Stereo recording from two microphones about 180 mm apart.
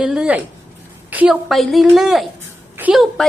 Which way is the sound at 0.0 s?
5° right (ahead or behind).